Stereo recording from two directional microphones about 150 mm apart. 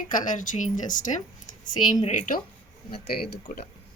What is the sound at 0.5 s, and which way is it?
Speech, 60° left (ahead or behind).